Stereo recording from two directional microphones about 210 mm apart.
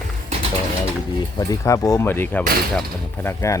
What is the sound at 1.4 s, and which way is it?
Speech, 15° left (ahead or behind).